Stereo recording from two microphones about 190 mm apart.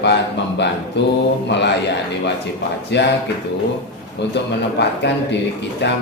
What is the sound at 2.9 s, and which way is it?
Speech, 65° left (ahead or behind).